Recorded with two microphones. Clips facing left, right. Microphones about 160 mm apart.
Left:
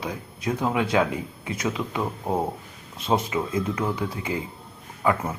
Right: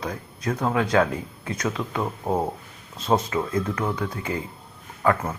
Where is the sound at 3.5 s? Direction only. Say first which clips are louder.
Even; 15° left (ahead or behind).